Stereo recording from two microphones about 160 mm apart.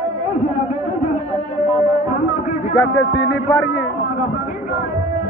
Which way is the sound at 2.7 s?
80° left.